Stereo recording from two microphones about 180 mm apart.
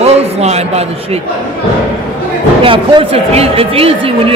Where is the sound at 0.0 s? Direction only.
35° right (ahead or behind).